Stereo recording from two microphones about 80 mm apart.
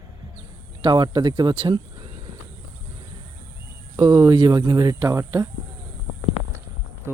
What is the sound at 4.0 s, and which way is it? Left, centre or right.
Speech, right.